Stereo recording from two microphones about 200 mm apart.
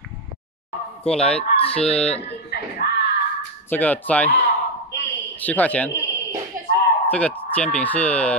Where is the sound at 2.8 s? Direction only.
55° left (ahead or behind).